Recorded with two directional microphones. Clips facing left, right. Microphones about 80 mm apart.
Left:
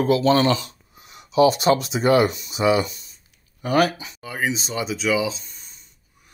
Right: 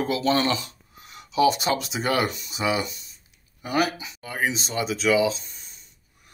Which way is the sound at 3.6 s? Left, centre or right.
Left.